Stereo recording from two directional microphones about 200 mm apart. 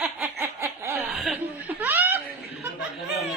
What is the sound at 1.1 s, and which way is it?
Chuckle, centre (ahead or behind).